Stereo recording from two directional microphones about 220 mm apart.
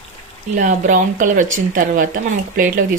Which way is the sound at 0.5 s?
35° right (ahead or behind).